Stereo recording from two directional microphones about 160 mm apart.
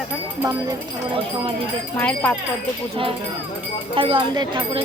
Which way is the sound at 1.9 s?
10° left (ahead or behind).